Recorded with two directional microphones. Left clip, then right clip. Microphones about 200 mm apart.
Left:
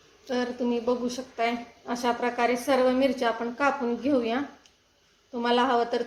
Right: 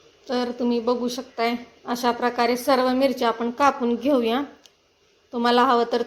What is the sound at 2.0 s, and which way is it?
A woman's voice, 45° right (ahead or behind).